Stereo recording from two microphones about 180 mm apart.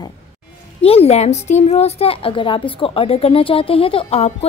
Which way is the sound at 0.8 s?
35° left (ahead or behind).